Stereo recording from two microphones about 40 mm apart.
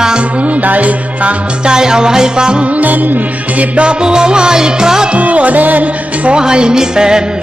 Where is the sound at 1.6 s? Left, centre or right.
Centre.